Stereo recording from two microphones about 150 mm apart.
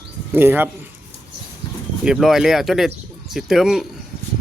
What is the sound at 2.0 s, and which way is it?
Speech, 5° right (ahead or behind).